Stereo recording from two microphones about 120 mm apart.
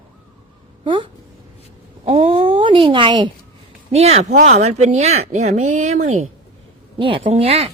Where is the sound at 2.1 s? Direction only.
55° right (ahead or behind); by 3.3 s 40° right (ahead or behind).